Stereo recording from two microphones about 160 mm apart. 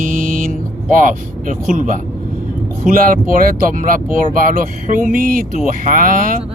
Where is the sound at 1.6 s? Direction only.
55° right (ahead or behind).